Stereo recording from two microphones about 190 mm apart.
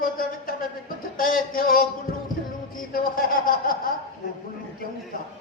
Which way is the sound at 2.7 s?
50° left (ahead or behind).